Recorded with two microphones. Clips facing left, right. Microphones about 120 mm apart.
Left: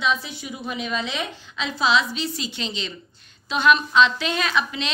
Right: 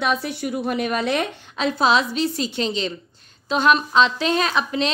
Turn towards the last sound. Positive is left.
turn(degrees=-40)  # may be behind; listen again after turning